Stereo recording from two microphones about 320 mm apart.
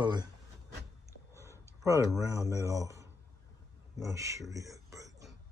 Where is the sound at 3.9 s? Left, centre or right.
Centre.